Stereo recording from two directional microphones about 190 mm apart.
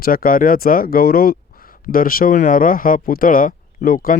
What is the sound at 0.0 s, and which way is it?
Speech, 50° left (ahead or behind).